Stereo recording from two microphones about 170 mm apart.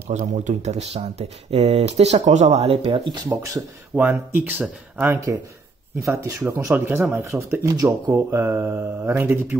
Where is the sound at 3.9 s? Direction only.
10° right (ahead or behind).